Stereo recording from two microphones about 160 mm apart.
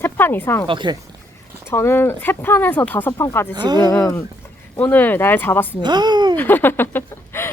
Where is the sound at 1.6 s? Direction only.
15° left (ahead or behind).